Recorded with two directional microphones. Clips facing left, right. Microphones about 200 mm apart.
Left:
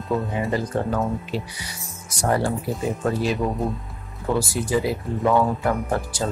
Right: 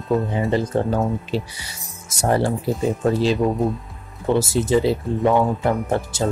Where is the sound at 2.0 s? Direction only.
25° right (ahead or behind).